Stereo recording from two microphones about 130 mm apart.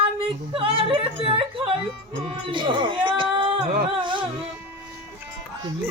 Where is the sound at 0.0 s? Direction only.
45° right (ahead or behind).